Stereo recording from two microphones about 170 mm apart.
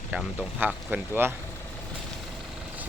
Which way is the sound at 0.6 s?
10° right (ahead or behind).